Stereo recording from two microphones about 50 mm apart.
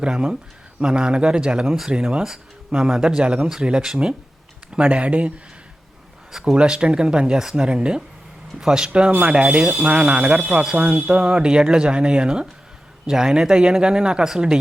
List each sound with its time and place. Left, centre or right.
0.0 s speech: centre
1.6 s speech: centre
1.9 s speech: centre
4.7 s speech: right
6.6 s speech: centre
8.9 s speech: right